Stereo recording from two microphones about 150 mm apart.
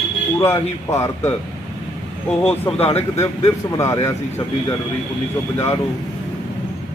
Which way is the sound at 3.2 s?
20° left (ahead or behind).